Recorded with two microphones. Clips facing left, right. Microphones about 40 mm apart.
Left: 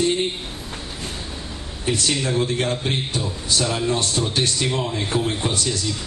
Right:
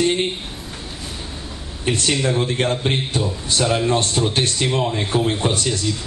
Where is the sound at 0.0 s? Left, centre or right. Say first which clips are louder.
Right 2 dB; right.